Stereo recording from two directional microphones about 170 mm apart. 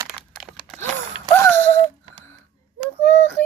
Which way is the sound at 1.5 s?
10° left (ahead or behind).